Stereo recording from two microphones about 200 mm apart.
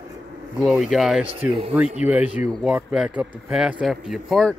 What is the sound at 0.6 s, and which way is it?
Speech, centre (ahead or behind).